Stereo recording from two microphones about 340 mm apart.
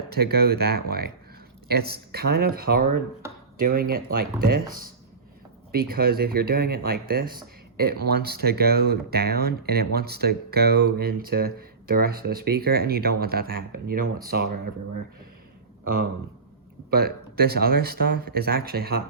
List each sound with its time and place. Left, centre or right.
0.1 s speech: right
16.9 s speech: right